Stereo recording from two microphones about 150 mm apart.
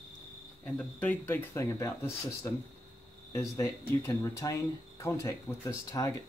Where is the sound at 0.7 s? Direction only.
10° left (ahead or behind).